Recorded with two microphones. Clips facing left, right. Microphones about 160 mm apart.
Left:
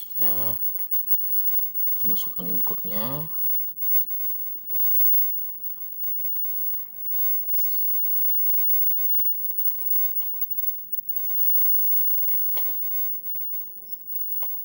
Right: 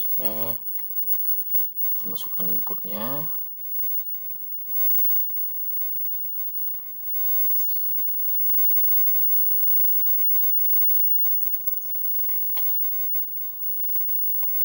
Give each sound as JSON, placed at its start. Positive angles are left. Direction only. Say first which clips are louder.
{"t": 0.2, "sound": "speech", "louder": "right 4 dB", "side_deg": -25}
{"t": 2.0, "sound": "speech", "louder": "left 2 dB", "side_deg": 10}